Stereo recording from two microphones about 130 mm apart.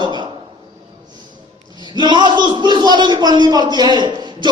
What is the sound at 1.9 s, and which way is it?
Speech, 35° right (ahead or behind).